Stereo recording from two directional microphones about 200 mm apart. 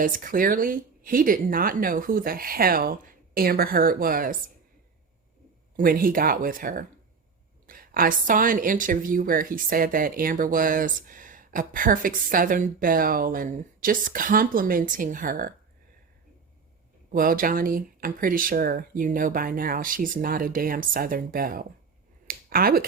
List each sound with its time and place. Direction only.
0.0 s a woman's voice: 45° right (ahead or behind)
5.7 s a woman's voice: 45° right (ahead or behind)
17.1 s a woman's voice: 45° right (ahead or behind)
22.3 s finger snapping: 45° right (ahead or behind)